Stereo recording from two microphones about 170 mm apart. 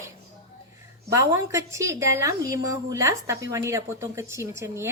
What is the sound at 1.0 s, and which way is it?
A woman's voice, 20° right (ahead or behind).